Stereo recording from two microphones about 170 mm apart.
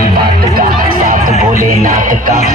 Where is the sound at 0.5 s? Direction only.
60° right (ahead or behind).